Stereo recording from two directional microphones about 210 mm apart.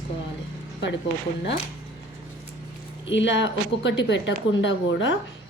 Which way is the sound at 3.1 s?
60° left (ahead or behind).